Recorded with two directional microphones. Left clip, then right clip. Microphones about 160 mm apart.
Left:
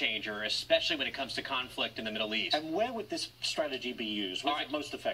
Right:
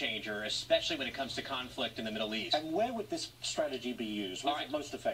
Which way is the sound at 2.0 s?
10° left (ahead or behind).